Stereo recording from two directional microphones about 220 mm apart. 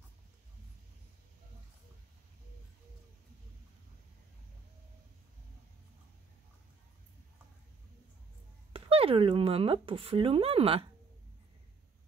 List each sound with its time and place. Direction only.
8.7 s speech: 25° right (ahead or behind)